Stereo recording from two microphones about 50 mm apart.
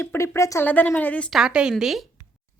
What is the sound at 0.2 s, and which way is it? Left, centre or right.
Speech, left.